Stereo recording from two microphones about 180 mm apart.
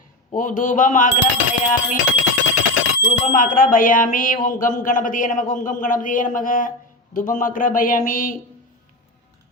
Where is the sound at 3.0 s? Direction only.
50° left (ahead or behind).